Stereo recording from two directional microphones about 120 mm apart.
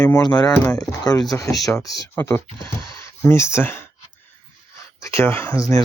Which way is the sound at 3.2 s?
20° left (ahead or behind).